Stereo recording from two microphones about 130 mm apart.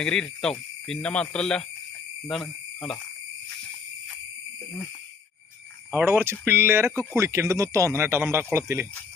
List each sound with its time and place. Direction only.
0.0 s speech: 5° left (ahead or behind)
5.9 s speech: 15° right (ahead or behind)